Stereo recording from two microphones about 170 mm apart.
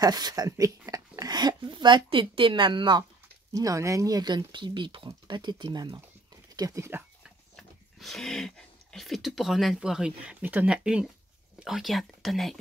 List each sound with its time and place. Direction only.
0.0 s speech: 25° right (ahead or behind)
7.2 s speech: centre (ahead or behind)